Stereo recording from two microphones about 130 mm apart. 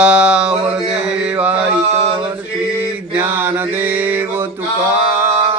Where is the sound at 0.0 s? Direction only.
10° right (ahead or behind).